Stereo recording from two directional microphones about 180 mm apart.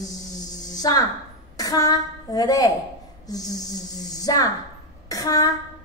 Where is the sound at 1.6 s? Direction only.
20° left (ahead or behind).